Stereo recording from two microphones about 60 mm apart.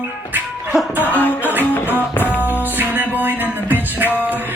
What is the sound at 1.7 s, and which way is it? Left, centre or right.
Music, left.